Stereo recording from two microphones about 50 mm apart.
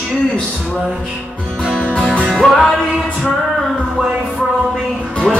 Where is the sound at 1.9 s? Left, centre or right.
Left.